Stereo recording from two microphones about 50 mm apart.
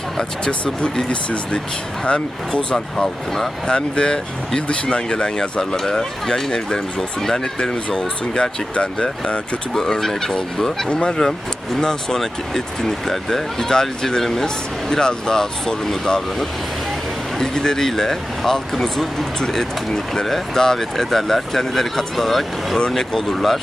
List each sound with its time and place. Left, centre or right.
0.2 s speech: centre
9.7 s speech: centre
17.3 s speech: centre